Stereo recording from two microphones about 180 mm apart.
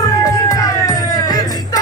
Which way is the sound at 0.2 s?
20° left (ahead or behind).